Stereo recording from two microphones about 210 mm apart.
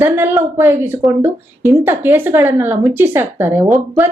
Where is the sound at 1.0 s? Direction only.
Centre (ahead or behind).